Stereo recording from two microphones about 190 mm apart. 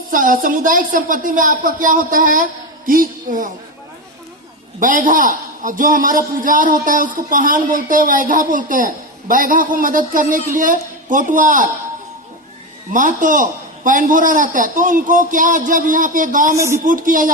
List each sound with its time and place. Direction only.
0.1 s a man's voice: 45° right (ahead or behind)
4.8 s a man's voice: 45° right (ahead or behind)
12.9 s a man's voice: 45° right (ahead or behind)
16.6 s speech: 15° right (ahead or behind)
16.8 s a man's voice: 45° right (ahead or behind)